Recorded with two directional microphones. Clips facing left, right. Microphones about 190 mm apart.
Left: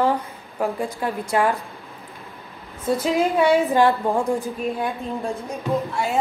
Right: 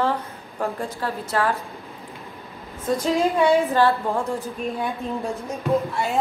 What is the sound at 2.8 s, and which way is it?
A woman's voice, 10° left (ahead or behind).